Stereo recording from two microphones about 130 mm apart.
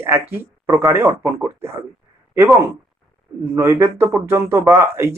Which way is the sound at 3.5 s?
20° right (ahead or behind).